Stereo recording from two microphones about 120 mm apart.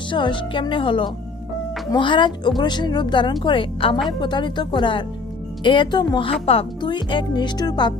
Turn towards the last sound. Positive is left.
turn(degrees=35)  # may be behind; listen again after turning